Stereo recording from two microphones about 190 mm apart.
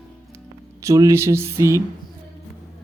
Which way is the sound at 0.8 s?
15° right (ahead or behind).